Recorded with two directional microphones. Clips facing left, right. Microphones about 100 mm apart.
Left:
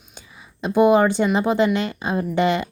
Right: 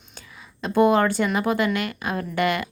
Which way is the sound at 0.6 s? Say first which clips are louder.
Left 3 dB; 15° left (ahead or behind).